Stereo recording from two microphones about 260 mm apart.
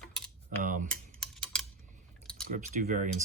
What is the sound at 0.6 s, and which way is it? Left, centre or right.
Speech, right.